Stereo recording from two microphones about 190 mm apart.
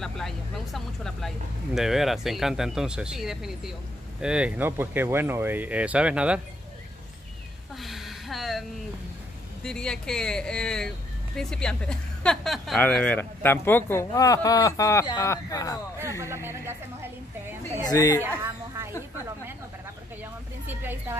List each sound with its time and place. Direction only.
0.0 s speech: centre (ahead or behind)
7.7 s a sound: centre (ahead or behind)
9.6 s a woman's voice: 5° left (ahead or behind)
16.3 s speech: 15° right (ahead or behind)
17.8 s a woman's voice: 20° left (ahead or behind)
18.4 s a sound: 15° right (ahead or behind)
20.6 s a woman's voice: 10° right (ahead or behind)